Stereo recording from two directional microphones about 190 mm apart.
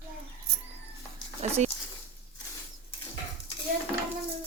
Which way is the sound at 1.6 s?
35° right (ahead or behind).